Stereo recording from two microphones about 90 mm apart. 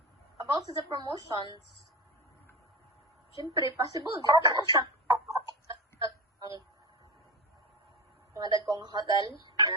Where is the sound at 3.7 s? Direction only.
45° right (ahead or behind).